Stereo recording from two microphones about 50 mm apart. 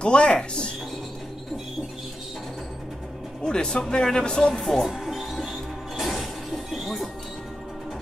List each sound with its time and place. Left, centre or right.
0.0 s speech: centre
3.4 s speech: centre
4.6 s speech: centre
4.8 s music: centre